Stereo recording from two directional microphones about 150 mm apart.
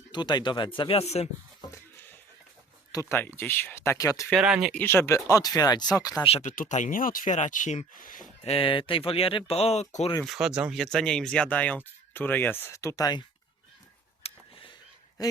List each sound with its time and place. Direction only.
0.1 s speech: 30° left (ahead or behind)
1.7 s a sound: 15° left (ahead or behind)
2.9 s speech: 20° left (ahead or behind)
4.3 s speech: 5° right (ahead or behind)
4.7 s speech: 15° left (ahead or behind)
6.2 s speech: 45° left (ahead or behind)
6.6 s speech: 55° left (ahead or behind)
8.4 s speech: 35° left (ahead or behind)
10.2 s speech: 5° right (ahead or behind); by 13.2 s 25° left (ahead or behind)
14.2 s a sound: 40° left (ahead or behind)
15.2 s quack: 25° left (ahead or behind)